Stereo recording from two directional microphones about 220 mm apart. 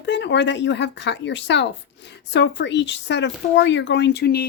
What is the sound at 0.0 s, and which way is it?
Speech, 50° left (ahead or behind).